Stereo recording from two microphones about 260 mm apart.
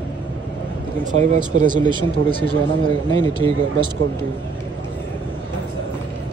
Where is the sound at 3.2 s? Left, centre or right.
Centre.